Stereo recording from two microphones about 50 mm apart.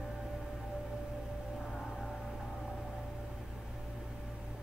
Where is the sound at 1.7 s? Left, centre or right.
Centre.